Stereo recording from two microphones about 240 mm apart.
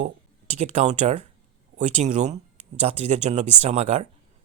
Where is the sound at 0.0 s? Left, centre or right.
Right.